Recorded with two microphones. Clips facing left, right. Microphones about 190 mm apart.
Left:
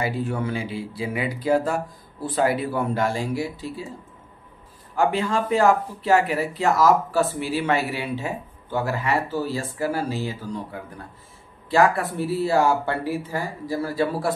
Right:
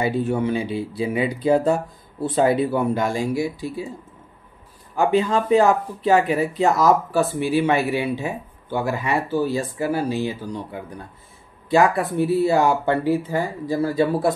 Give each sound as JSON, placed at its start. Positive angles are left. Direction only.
{"t": 0.0, "sound": "speech", "side_deg": -20}
{"t": 4.9, "sound": "speech", "side_deg": -20}